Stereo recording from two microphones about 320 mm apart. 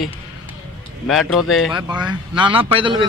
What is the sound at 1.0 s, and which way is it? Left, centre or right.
Speech, centre.